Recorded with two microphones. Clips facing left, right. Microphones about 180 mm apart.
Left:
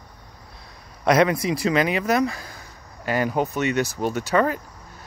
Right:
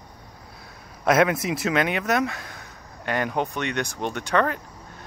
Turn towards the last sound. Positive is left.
turn(degrees=5)  # may be behind; listen again after turning